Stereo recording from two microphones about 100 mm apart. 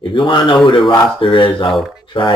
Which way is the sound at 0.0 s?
50° left (ahead or behind).